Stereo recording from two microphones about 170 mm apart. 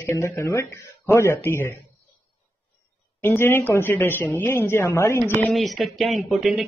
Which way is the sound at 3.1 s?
15° left (ahead or behind).